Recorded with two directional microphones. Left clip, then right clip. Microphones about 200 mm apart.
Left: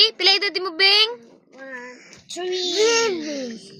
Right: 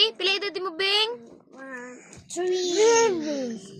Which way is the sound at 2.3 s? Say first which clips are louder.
Left 1 dB; 35° right (ahead or behind).